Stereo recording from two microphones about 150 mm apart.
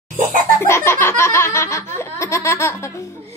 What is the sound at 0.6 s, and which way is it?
Laughter, 15° left (ahead or behind).